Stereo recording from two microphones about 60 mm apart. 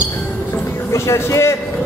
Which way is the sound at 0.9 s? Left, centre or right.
Left.